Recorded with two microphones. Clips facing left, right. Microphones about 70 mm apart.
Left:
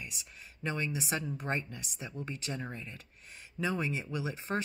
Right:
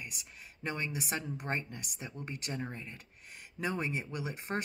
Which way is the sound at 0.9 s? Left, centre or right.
Right.